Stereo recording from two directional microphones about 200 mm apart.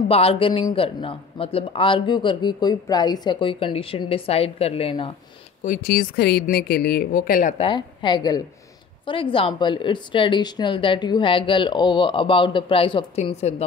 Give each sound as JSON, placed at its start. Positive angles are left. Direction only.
{"t": 0.1, "sound": "speech", "side_deg": 30}
{"t": 5.6, "sound": "speech", "side_deg": 45}
{"t": 7.5, "sound": "speech", "side_deg": 25}